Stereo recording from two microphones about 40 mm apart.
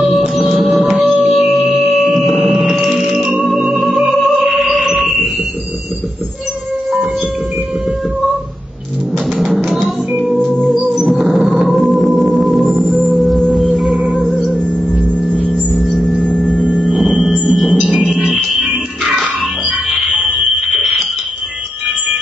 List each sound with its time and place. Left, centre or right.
0.3 s music: centre
4.8 s a sound: centre
9.5 s music: centre
10.5 s music: centre
10.8 s music: centre
11.7 s organ: centre
13.1 s music: centre
14.5 s music: centre
16.7 s music: centre